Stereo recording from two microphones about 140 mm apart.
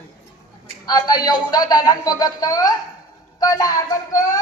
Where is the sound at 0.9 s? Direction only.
30° left (ahead or behind).